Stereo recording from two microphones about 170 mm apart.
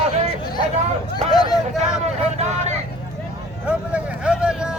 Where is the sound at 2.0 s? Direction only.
40° right (ahead or behind).